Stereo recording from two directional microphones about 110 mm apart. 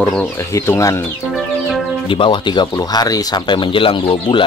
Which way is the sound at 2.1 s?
50° left (ahead or behind).